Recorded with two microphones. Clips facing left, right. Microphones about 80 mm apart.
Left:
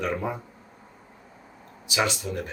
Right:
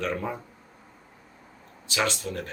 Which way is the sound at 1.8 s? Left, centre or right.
Centre.